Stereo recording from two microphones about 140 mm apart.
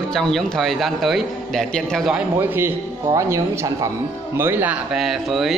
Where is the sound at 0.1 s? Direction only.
5° left (ahead or behind).